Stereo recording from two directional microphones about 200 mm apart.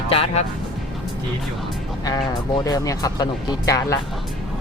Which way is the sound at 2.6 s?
15° left (ahead or behind).